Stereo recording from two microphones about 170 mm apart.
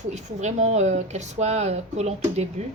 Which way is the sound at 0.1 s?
40° right (ahead or behind).